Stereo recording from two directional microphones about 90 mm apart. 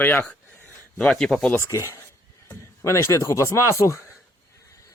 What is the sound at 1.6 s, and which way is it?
Speech, 35° left (ahead or behind).